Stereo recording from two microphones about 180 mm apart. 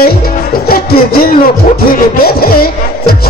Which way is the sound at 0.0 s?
55° left (ahead or behind).